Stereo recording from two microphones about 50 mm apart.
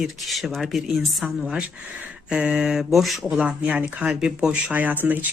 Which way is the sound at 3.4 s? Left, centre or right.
Right.